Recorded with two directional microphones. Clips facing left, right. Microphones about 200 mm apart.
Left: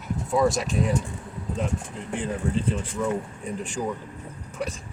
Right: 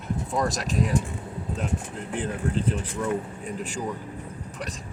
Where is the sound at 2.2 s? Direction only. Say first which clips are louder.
Even; centre (ahead or behind).